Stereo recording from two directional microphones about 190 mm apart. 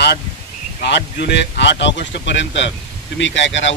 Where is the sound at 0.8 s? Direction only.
65° left (ahead or behind).